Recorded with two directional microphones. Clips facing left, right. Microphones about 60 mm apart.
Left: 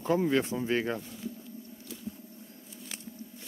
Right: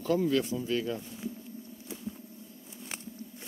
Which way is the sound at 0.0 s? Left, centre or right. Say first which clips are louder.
Left 1 dB; left.